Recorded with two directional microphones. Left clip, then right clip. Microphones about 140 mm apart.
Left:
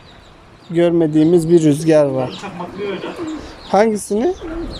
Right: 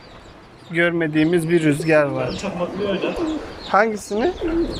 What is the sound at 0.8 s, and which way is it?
Speech, 45° left (ahead or behind).